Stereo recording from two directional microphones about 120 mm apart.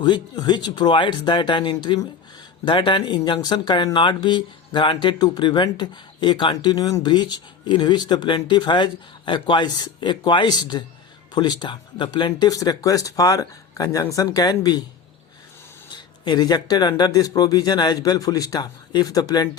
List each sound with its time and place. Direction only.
0.0 s speech: 35° left (ahead or behind)
15.9 s speech: 35° left (ahead or behind)